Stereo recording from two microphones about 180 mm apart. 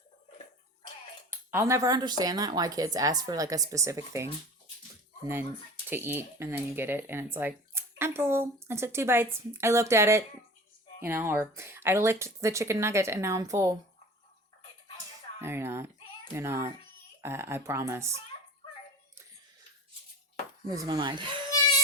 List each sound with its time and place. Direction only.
1.3 s speech: 10° right (ahead or behind)
5.9 s speech: 10° right (ahead or behind)
15.4 s speech: 15° right (ahead or behind)
20.7 s speech: 20° right (ahead or behind)